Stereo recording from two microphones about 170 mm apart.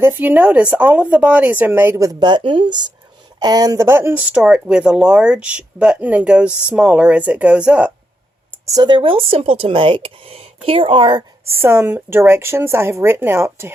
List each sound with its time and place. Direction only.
0.0 s speech: 10° right (ahead or behind)
8.6 s speech: 25° right (ahead or behind)
11.4 s speech: 15° right (ahead or behind)